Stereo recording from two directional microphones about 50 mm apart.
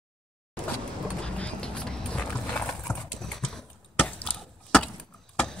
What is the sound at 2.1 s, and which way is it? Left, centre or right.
Horse, left.